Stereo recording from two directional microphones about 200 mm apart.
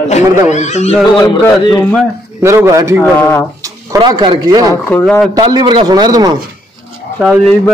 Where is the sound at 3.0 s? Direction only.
10° left (ahead or behind).